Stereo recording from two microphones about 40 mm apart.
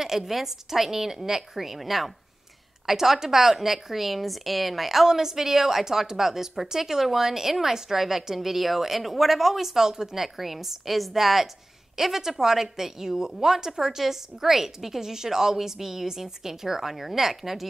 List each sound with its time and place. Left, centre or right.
0.0 s a woman's voice: centre